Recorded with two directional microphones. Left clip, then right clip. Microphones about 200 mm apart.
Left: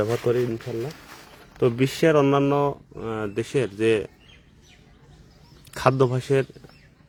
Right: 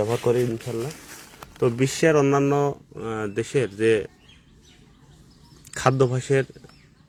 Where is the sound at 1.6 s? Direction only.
15° left (ahead or behind).